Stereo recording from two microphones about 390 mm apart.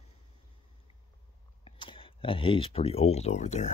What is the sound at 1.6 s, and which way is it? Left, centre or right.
Speech, centre.